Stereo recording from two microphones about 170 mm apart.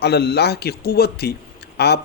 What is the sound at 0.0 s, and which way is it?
A man's voice, 75° left (ahead or behind).